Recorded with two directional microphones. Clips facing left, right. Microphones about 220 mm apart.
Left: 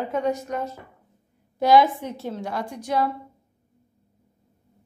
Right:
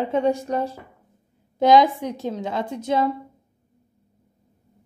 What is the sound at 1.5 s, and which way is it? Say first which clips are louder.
A woman's voice: right 2 dB; 20° right (ahead or behind).